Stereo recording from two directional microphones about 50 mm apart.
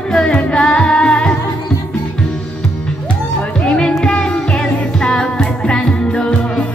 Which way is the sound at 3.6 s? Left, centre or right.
Left.